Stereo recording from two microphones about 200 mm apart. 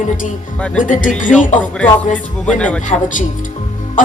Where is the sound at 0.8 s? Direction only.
40° left (ahead or behind).